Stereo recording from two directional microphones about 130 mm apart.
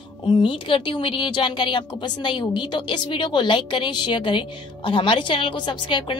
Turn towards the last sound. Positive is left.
turn(degrees=35)  # may be behind; listen again after turning